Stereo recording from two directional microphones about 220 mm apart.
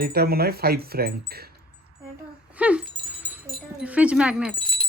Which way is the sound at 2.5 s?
5° right (ahead or behind).